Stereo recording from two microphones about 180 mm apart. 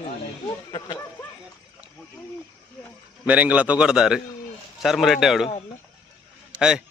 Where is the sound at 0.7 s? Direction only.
25° left (ahead or behind).